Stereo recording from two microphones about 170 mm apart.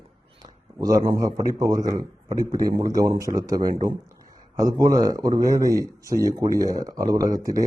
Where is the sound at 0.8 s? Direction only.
20° right (ahead or behind).